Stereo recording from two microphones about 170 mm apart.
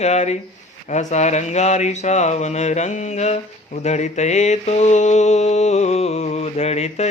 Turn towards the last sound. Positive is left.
turn(degrees=40)  # may be behind; listen again after turning